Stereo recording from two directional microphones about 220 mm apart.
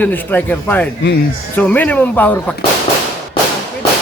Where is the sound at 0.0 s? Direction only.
10° left (ahead or behind).